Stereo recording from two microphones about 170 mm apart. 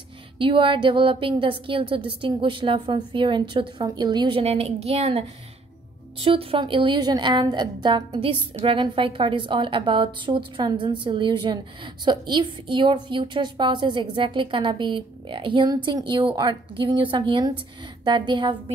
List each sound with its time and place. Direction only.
0.4 s a woman's voice: 30° right (ahead or behind)
6.2 s a woman's voice: 30° right (ahead or behind)